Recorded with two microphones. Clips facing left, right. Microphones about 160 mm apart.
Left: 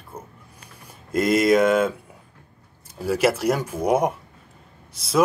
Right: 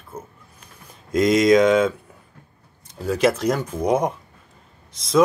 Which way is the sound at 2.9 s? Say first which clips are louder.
Right 1 dB; 10° left (ahead or behind).